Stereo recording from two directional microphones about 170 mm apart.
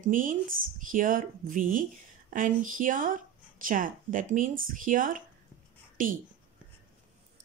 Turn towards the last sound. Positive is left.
turn(degrees=-50)  # may be behind; listen again after turning